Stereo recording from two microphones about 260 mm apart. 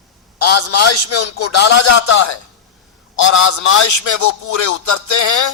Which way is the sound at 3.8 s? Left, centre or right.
Left.